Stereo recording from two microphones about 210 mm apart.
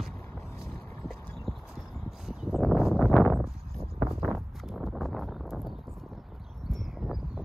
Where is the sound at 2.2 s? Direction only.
Centre (ahead or behind).